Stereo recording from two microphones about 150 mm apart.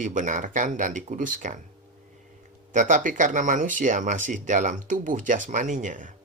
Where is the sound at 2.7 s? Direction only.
60° right (ahead or behind).